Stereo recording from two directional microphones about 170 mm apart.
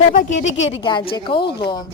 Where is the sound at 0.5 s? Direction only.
90° left.